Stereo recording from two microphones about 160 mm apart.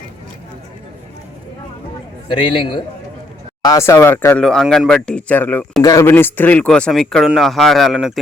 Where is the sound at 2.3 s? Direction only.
30° left (ahead or behind).